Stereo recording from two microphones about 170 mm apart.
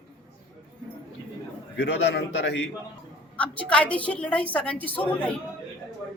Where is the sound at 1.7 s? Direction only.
90° left.